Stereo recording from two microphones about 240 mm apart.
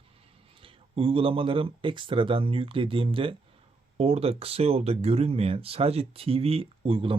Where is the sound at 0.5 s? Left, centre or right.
Right.